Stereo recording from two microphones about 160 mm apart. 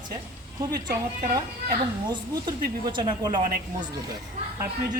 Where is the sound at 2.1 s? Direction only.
30° right (ahead or behind).